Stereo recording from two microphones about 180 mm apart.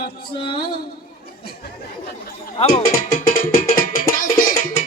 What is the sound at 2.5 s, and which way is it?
Speech, 35° left (ahead or behind).